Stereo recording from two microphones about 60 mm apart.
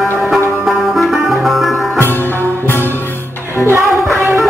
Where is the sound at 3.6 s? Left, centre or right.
Right.